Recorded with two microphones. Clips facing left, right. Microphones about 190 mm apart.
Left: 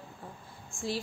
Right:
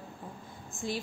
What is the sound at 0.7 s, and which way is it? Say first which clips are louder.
Speech: even; 20° right (ahead or behind).